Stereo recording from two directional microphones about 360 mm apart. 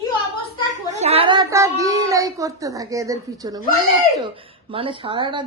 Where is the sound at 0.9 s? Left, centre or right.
Centre.